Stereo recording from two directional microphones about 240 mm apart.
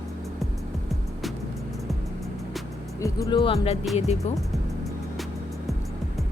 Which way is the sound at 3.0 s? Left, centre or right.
Centre.